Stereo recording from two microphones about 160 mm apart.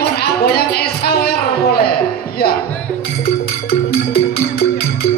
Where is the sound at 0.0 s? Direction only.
80° left.